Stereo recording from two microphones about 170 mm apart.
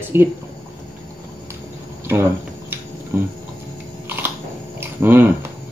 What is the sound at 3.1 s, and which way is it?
Speech, 15° right (ahead or behind).